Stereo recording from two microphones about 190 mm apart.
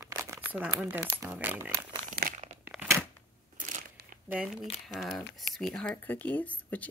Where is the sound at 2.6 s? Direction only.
10° right (ahead or behind).